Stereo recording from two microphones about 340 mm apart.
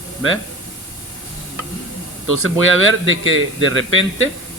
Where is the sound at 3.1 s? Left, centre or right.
Right.